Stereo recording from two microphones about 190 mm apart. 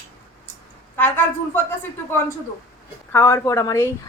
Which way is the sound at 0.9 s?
10° left (ahead or behind).